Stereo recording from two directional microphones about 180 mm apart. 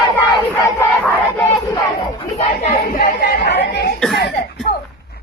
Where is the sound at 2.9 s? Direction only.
55° left (ahead or behind).